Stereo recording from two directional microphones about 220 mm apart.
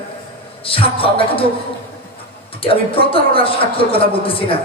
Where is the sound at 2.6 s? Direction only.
25° left (ahead or behind).